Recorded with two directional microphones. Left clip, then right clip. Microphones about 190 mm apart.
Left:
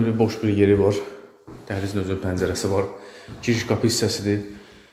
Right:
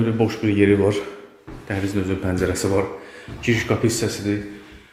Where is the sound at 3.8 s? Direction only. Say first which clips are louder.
Even; 15° left (ahead or behind).